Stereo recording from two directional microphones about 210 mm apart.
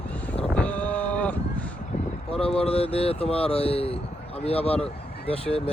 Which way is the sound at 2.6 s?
30° left (ahead or behind).